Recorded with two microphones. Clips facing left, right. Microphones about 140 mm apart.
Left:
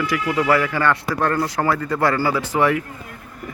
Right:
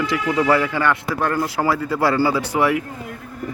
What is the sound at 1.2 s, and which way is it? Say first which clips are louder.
Speech: even; 5° right (ahead or behind).